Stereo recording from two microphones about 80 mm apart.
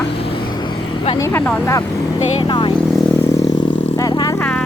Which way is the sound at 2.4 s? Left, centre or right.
Left.